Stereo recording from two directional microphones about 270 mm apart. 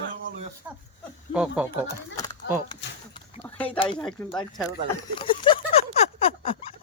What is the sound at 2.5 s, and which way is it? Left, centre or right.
Speech, left.